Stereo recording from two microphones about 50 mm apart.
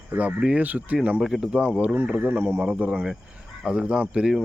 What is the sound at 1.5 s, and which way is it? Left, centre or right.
Speech, right.